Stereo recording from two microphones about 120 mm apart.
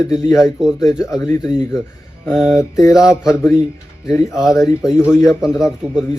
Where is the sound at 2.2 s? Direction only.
Centre (ahead or behind).